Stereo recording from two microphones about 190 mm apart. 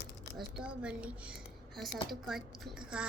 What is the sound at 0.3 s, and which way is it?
A woman's voice, 5° right (ahead or behind).